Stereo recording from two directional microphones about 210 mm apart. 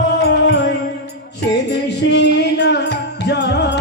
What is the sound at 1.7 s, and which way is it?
Music, 55° left (ahead or behind).